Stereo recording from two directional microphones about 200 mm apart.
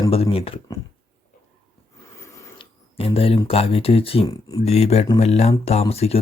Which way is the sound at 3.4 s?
30° left (ahead or behind).